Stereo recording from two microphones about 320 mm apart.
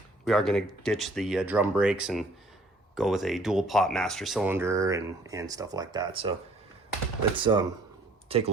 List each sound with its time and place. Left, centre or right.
0.3 s speech: centre
7.3 s speech: centre